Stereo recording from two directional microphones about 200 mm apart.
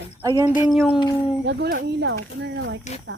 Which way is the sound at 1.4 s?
60° right (ahead or behind).